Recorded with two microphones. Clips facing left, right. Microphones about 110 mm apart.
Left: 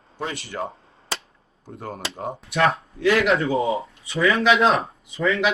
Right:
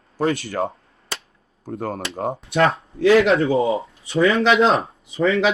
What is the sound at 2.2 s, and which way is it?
Speech, 30° right (ahead or behind).